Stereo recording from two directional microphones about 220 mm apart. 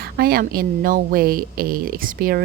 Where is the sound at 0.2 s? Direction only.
45° right (ahead or behind).